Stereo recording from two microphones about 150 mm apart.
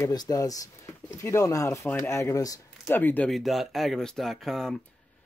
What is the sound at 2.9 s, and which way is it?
Speech, 10° left (ahead or behind).